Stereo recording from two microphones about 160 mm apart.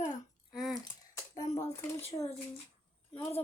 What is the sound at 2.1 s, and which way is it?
Speech, 35° left (ahead or behind).